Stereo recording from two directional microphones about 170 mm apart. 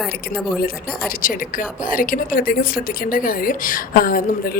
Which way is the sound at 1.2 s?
55° left (ahead or behind).